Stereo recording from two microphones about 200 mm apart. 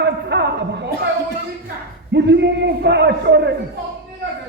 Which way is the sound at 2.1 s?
60° right (ahead or behind).